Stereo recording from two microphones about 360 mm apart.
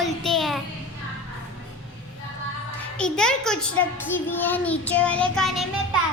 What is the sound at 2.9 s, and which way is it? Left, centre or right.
A child's voice, centre.